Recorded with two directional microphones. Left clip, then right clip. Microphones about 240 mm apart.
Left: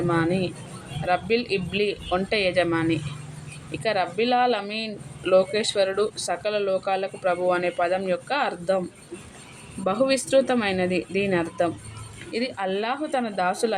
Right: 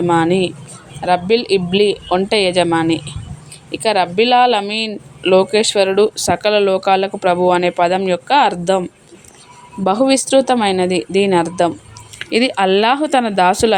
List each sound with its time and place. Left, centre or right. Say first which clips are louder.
0.1 s speech: right 11 dB; right
9.8 s speech: right 8 dB; right